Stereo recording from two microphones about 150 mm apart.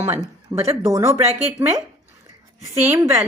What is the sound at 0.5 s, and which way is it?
Speech, 15° right (ahead or behind).